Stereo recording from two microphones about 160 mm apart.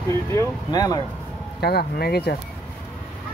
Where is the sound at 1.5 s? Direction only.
80° left.